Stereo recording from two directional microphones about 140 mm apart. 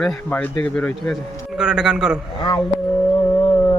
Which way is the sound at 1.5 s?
5° right (ahead or behind).